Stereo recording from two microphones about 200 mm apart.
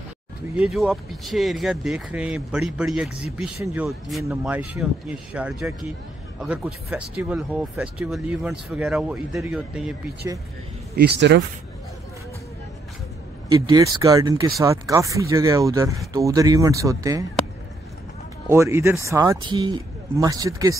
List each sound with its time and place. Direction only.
0.6 s speech: centre (ahead or behind)
10.2 s speech: 15° right (ahead or behind)
11.0 s speech: 55° right (ahead or behind)
13.5 s speech: 20° right (ahead or behind)
18.5 s speech: 15° right (ahead or behind)